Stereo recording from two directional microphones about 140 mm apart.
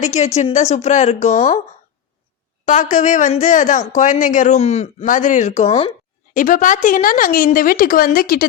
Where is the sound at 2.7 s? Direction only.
60° left (ahead or behind); by 5.9 s 45° left (ahead or behind).